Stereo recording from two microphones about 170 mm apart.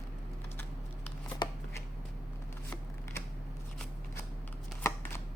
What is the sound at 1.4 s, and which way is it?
Shuffling cards, 25° left (ahead or behind).